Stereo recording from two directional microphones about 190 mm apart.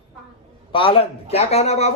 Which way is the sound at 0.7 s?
30° left (ahead or behind).